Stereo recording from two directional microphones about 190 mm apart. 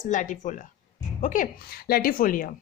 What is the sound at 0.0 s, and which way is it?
A woman's voice, 40° left (ahead or behind).